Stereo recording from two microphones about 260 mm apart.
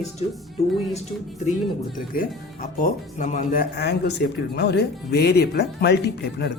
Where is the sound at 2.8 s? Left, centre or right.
Left.